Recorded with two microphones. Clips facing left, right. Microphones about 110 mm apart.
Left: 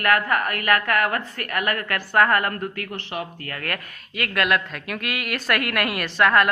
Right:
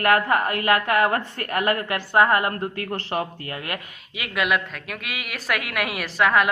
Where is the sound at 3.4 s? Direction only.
20° right (ahead or behind).